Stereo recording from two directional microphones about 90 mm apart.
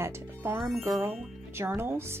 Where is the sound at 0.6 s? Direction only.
Centre (ahead or behind).